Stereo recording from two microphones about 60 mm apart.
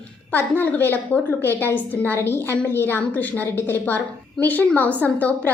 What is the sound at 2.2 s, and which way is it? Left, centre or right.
A woman's voice, left.